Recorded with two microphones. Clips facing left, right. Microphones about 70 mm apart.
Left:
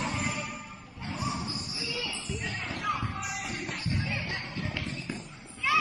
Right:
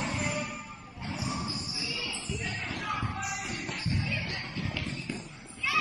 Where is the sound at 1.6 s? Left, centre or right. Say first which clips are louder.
Left 1 dB; left.